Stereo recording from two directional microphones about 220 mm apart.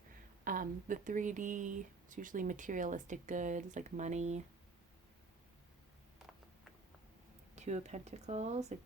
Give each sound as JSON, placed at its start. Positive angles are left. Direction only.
{"t": 0.4, "sound": "speech", "side_deg": -40}
{"t": 7.5, "sound": "speech", "side_deg": -30}